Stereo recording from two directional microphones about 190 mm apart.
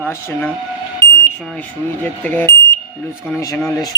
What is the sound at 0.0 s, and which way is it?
Speech, 10° left (ahead or behind).